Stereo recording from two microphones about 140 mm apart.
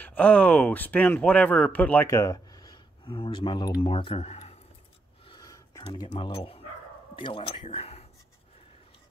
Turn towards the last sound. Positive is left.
turn(degrees=45)  # may be behind; listen again after turning